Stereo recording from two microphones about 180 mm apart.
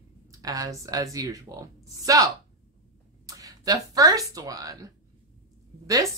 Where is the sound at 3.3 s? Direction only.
20° right (ahead or behind).